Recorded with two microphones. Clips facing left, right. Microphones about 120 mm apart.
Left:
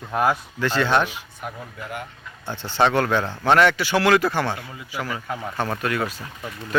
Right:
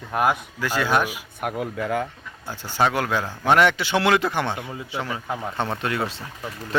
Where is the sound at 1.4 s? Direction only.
90° right.